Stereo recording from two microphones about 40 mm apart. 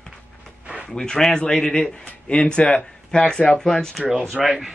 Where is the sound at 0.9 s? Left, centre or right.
Centre.